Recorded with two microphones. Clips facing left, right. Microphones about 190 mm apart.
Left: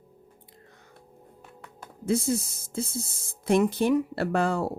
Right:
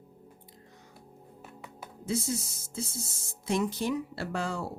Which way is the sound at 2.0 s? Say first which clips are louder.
Left 6 dB; 55° left (ahead or behind).